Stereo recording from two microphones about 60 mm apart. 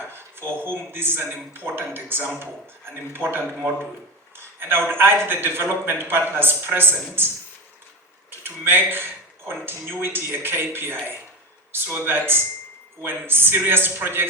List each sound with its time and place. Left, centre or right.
0.0 s speech: right
8.3 s speech: right